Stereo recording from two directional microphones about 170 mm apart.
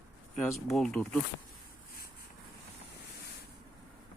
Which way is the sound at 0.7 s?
5° left (ahead or behind).